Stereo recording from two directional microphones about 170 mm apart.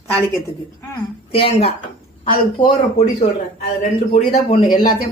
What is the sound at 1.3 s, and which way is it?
A woman's voice, 35° left (ahead or behind).